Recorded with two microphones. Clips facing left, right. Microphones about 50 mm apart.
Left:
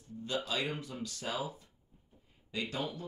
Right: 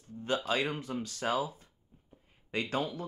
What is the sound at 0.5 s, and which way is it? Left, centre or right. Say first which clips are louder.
Speech: right 4 dB; right.